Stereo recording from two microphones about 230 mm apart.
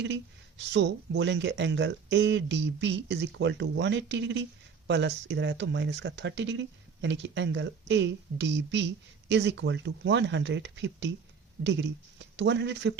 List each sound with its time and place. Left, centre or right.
0.0 s speech: right